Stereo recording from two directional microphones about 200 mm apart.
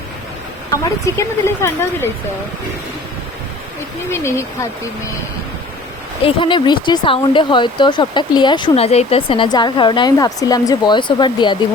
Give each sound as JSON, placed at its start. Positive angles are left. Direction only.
{"t": 0.7, "sound": "speech", "side_deg": 15}
{"t": 4.1, "sound": "speech", "side_deg": 15}
{"t": 6.2, "sound": "speech", "side_deg": 25}